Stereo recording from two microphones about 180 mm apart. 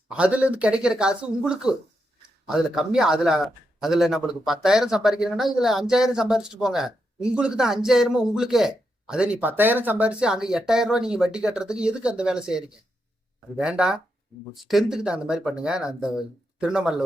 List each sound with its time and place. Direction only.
0.1 s speech: 5° right (ahead or behind)